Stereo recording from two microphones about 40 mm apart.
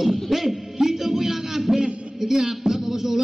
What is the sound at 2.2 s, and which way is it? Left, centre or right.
Music, centre.